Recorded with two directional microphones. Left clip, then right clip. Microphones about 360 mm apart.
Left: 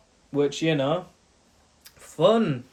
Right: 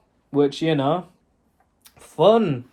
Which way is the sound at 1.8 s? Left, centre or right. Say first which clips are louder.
Right 4 dB; centre.